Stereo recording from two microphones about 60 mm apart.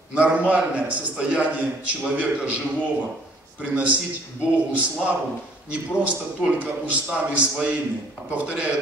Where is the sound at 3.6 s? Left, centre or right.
Right.